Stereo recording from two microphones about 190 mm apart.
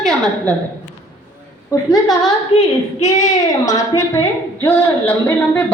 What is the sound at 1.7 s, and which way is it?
Speech, 15° left (ahead or behind).